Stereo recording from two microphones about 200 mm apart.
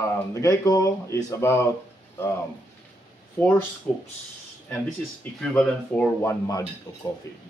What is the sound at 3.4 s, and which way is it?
Speech, 10° left (ahead or behind).